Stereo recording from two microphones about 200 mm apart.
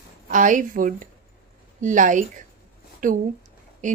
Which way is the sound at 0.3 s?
40° right (ahead or behind).